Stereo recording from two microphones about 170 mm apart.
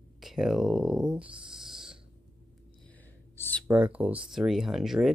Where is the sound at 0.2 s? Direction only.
Centre (ahead or behind).